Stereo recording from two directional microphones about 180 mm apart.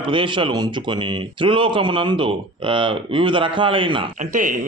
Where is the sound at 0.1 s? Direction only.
30° right (ahead or behind).